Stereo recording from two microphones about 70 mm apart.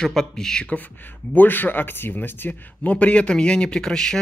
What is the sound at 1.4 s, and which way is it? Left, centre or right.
A man's voice, left.